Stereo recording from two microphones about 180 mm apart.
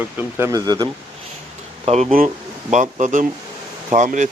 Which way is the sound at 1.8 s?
35° right (ahead or behind).